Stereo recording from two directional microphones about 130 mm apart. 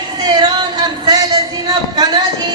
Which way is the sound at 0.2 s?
30° right (ahead or behind).